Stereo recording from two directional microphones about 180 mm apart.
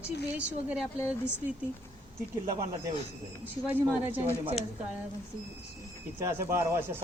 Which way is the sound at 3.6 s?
10° right (ahead or behind).